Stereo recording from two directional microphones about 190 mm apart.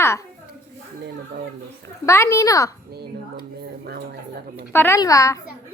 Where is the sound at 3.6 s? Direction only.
55° right (ahead or behind).